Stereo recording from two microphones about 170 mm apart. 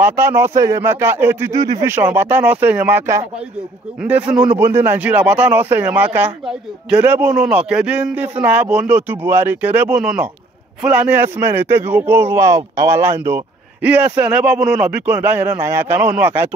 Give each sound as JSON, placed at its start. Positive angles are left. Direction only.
{"t": 0.0, "sound": "a man's voice", "side_deg": -15}